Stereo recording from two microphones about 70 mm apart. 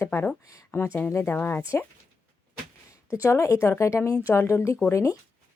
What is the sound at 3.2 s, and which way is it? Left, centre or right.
A woman's voice, left.